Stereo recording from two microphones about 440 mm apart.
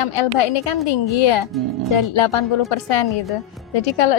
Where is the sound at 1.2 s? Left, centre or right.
Left.